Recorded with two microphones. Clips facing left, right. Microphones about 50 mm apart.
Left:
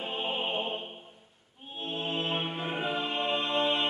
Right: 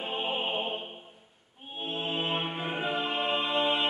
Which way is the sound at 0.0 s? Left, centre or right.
Centre.